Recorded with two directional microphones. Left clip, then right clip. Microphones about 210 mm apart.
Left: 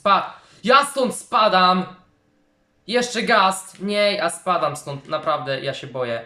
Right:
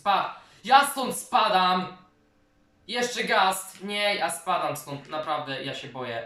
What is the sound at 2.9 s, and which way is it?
Speech, 45° left (ahead or behind).